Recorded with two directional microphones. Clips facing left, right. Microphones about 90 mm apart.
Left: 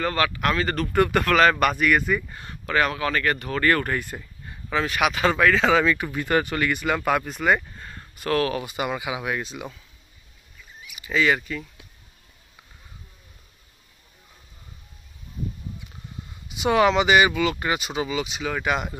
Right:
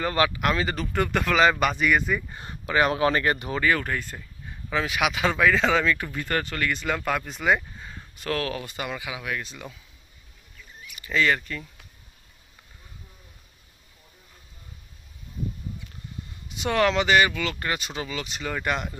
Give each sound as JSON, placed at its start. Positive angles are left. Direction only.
{"t": 0.0, "sound": "speech", "side_deg": -20}
{"t": 0.6, "sound": "speech", "side_deg": -5}
{"t": 3.3, "sound": "speech", "side_deg": -10}
{"t": 3.6, "sound": "speech", "side_deg": 0}
{"t": 8.7, "sound": "speech", "side_deg": 15}
{"t": 10.8, "sound": "speech", "side_deg": 10}
{"t": 16.4, "sound": "speech", "side_deg": 10}